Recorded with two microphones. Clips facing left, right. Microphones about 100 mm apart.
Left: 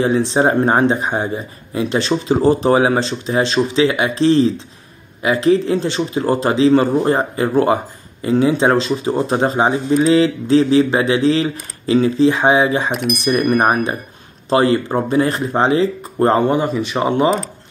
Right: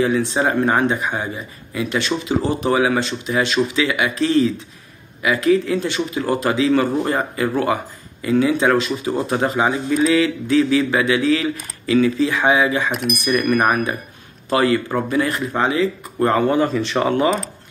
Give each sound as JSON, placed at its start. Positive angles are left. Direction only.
{"t": 0.0, "sound": "speech", "side_deg": 30}
{"t": 12.9, "sound": "speech", "side_deg": 0}
{"t": 13.3, "sound": "speech", "side_deg": 35}